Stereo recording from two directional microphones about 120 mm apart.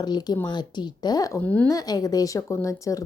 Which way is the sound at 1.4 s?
15° left (ahead or behind).